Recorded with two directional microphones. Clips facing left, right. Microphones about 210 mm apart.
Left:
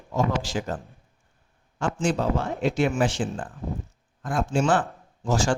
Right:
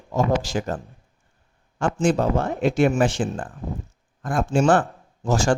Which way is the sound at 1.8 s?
50° right (ahead or behind).